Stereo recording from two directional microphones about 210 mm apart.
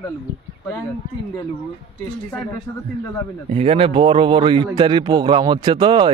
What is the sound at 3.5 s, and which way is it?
Speech, 30° right (ahead or behind).